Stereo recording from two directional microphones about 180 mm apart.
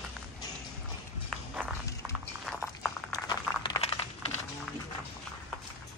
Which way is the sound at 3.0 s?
20° left (ahead or behind).